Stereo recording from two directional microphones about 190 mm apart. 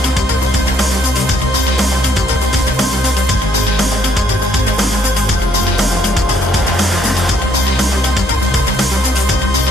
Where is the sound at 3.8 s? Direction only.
Centre (ahead or behind).